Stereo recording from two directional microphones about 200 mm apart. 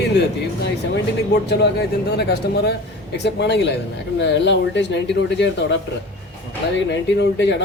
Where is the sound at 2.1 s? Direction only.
55° left (ahead or behind).